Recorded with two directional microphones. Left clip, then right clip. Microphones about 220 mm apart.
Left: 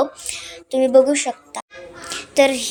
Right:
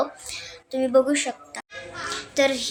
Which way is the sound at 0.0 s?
35° left (ahead or behind).